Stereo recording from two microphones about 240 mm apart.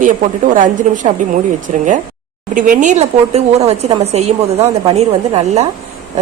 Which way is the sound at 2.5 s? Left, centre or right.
Right.